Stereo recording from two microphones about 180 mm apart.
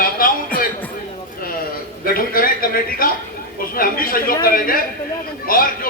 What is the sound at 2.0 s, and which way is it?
A man's voice, 55° left (ahead or behind).